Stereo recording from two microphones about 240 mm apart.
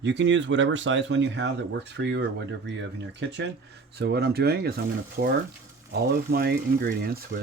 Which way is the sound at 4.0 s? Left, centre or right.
Right.